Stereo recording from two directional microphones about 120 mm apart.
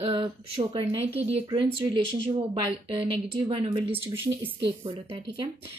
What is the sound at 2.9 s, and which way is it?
A woman's voice, 50° right (ahead or behind).